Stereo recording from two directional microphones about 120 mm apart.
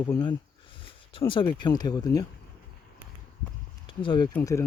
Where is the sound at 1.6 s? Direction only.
35° left (ahead or behind).